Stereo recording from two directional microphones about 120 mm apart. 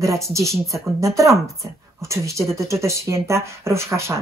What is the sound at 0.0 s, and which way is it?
Speech, 25° right (ahead or behind).